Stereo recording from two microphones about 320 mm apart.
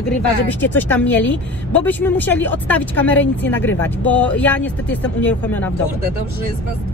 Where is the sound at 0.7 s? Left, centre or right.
Centre.